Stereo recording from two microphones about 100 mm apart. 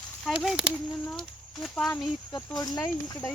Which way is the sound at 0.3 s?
10° right (ahead or behind).